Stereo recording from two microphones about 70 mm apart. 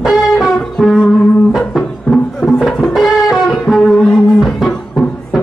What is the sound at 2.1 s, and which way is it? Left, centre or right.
Music, centre.